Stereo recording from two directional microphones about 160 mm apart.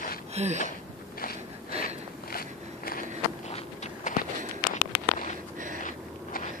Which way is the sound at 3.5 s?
50° left (ahead or behind).